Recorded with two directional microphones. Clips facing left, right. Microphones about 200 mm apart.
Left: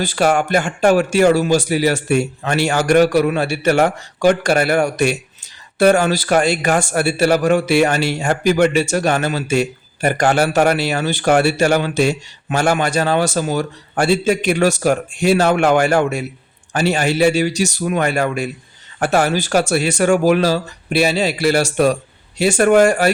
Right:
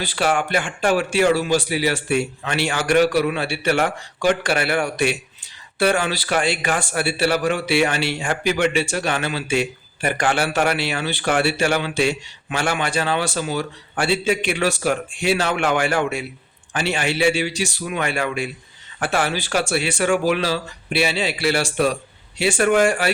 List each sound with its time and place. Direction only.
0.0 s speech: 45° left (ahead or behind)